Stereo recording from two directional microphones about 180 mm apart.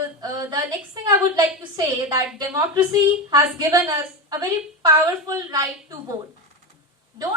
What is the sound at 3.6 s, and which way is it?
A woman's voice, 20° right (ahead or behind).